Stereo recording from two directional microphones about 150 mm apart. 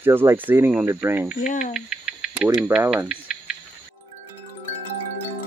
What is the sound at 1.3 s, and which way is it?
Cricket, 55° left (ahead or behind).